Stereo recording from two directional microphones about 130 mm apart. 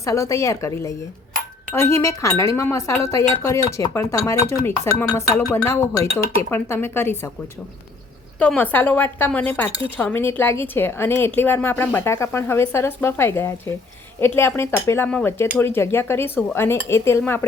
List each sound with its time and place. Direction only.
0.0 s a woman's voice: 25° left (ahead or behind)
8.4 s a woman's voice: 10° left (ahead or behind)